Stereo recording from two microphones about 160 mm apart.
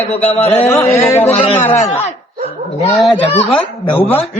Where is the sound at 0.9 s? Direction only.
20° left (ahead or behind).